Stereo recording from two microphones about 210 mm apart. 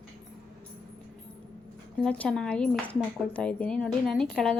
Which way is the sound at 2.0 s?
5° left (ahead or behind).